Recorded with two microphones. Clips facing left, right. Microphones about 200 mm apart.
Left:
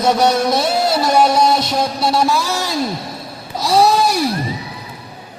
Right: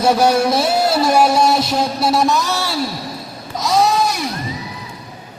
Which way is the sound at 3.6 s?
30° left (ahead or behind).